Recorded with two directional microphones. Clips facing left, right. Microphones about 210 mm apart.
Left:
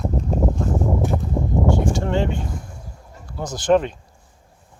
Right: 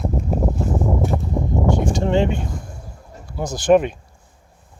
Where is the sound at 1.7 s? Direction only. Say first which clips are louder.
Right 3 dB; 15° right (ahead or behind).